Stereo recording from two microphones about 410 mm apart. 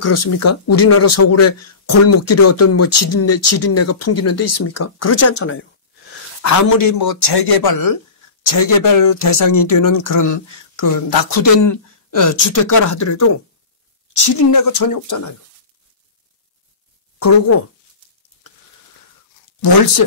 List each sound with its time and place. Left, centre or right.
0.0 s speech: left
6.4 s speech: left
17.2 s speech: left